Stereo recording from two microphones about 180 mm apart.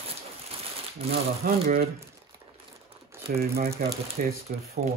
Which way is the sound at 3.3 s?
55° right (ahead or behind).